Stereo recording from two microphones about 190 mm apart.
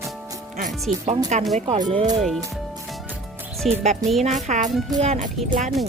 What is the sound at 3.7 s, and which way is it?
Speech, 35° right (ahead or behind).